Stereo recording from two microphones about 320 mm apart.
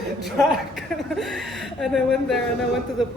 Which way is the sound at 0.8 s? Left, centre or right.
Centre.